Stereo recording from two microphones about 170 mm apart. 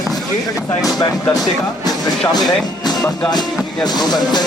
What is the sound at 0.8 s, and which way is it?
Speech, 20° left (ahead or behind).